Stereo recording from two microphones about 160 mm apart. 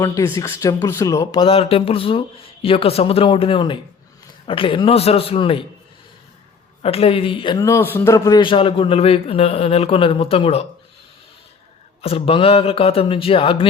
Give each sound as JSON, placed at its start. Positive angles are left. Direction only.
{"t": 0.0, "sound": "speech", "side_deg": 20}
{"t": 1.4, "sound": "a man's voice", "side_deg": 35}
{"t": 6.8, "sound": "a man's voice", "side_deg": 35}
{"t": 7.6, "sound": "a man's voice", "side_deg": 15}
{"t": 12.0, "sound": "a man's voice", "side_deg": 35}